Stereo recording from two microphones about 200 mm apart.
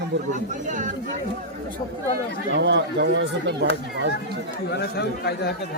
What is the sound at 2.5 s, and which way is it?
Speech, 60° right (ahead or behind).